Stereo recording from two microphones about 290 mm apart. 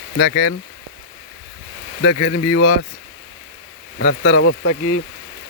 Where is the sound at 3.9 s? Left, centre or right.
Left.